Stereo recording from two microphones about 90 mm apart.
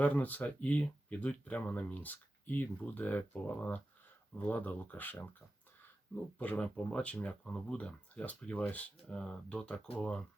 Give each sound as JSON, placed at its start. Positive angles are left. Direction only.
{"t": 0.0, "sound": "speech", "side_deg": 15}